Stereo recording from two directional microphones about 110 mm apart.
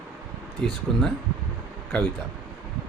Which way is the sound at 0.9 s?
5° left (ahead or behind).